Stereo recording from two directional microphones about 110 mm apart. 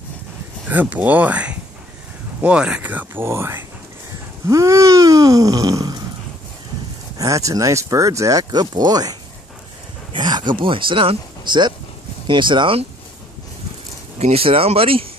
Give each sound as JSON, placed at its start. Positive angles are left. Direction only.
{"t": 0.7, "sound": "speech", "side_deg": -15}
{"t": 7.2, "sound": "speech", "side_deg": -30}
{"t": 10.1, "sound": "speech", "side_deg": -45}
{"t": 14.1, "sound": "speech", "side_deg": -70}